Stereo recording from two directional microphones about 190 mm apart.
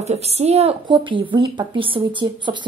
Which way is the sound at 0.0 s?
35° right (ahead or behind).